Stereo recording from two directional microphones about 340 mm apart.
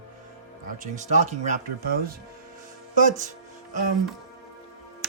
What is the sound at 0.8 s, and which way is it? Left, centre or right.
Speech, centre.